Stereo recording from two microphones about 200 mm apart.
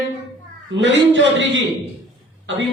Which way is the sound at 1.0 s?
65° right (ahead or behind).